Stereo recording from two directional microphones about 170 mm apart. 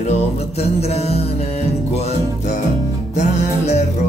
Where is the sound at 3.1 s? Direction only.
40° left (ahead or behind).